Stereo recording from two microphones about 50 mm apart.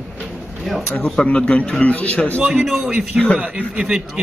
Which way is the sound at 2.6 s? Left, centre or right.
Centre.